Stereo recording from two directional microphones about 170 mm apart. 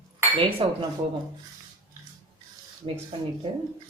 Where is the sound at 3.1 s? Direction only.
30° right (ahead or behind).